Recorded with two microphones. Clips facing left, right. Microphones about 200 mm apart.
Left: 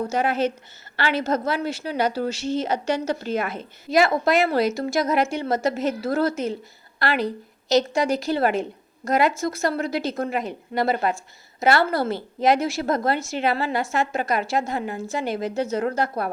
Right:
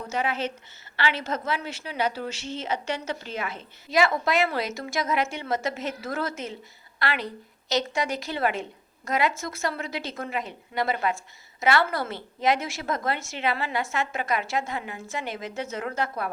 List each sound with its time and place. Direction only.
0.1 s a woman's voice: 40° left (ahead or behind)